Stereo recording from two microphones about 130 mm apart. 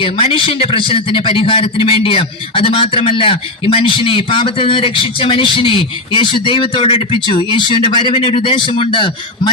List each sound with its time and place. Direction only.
0.0 s a man's voice: 40° left (ahead or behind)